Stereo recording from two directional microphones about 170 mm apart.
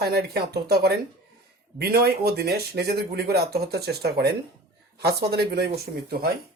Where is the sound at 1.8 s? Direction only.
65° right (ahead or behind).